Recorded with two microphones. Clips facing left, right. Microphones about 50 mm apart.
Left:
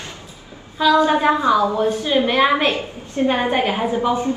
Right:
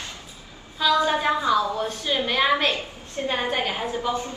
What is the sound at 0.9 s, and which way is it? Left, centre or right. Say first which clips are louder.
A woman's voice: left 6 dB; left.